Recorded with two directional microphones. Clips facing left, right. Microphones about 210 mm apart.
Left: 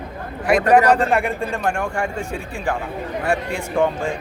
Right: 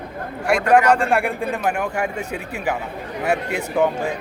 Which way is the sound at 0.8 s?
35° left (ahead or behind).